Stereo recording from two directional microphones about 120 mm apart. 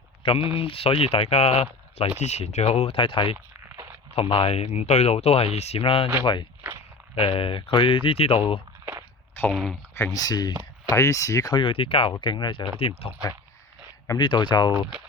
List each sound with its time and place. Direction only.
0.2 s speech: 50° left (ahead or behind)
7.2 s speech: 50° left (ahead or behind)
9.5 s speech: 5° right (ahead or behind)
10.0 s speech: 30° left (ahead or behind)
11.6 s speech: 50° left (ahead or behind)
12.8 s speech: 50° left (ahead or behind)
14.2 s speech: 40° left (ahead or behind)